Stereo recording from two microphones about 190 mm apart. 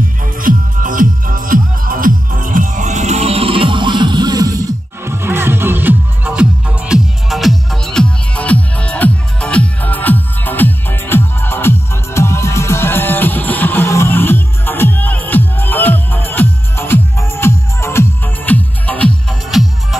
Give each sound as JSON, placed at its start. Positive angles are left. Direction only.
{"t": 0.4, "sound": "music", "side_deg": -45}